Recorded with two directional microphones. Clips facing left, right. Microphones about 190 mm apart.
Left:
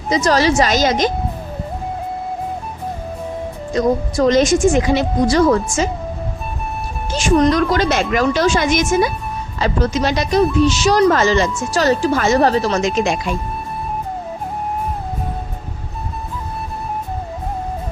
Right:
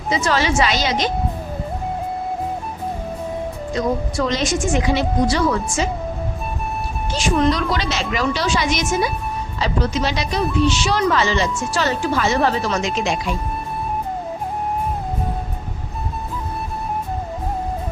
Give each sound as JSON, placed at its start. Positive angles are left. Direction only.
{"t": 0.1, "sound": "a woman's voice", "side_deg": 40}
{"t": 3.8, "sound": "speech", "side_deg": 40}
{"t": 7.1, "sound": "speech", "side_deg": 45}